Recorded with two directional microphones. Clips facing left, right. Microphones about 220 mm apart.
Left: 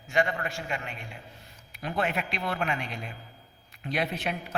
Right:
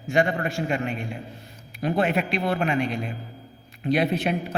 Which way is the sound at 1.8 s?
35° right (ahead or behind).